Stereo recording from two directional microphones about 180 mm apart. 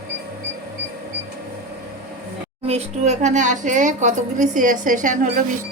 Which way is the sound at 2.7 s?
35° right (ahead or behind).